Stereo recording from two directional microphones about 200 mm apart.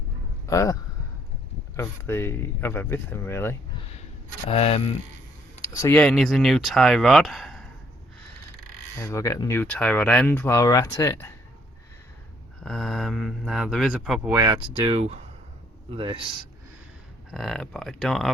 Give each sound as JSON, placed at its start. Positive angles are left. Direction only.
{"t": 0.4, "sound": "a man's voice", "side_deg": 15}
{"t": 4.4, "sound": "speech", "side_deg": 30}
{"t": 5.7, "sound": "speech", "side_deg": 10}
{"t": 9.0, "sound": "speech", "side_deg": 15}
{"t": 12.5, "sound": "speech", "side_deg": 0}
{"t": 14.3, "sound": "speech", "side_deg": -20}
{"t": 17.3, "sound": "speech", "side_deg": 0}